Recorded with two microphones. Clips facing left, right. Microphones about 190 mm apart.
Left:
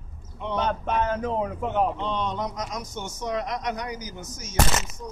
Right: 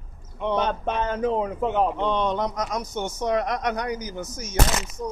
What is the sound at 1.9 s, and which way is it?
A man's voice, 60° right (ahead or behind).